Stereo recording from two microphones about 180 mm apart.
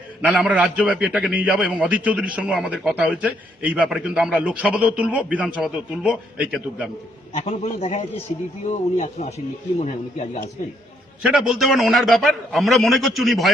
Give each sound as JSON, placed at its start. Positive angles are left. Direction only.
{"t": 0.2, "sound": "a man's voice", "side_deg": -5}
{"t": 7.3, "sound": "a man's voice", "side_deg": 40}
{"t": 11.2, "sound": "a man's voice", "side_deg": -5}